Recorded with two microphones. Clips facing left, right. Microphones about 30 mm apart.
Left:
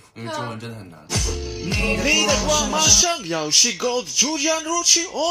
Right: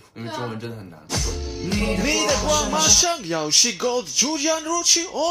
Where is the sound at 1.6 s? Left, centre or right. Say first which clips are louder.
Even; centre.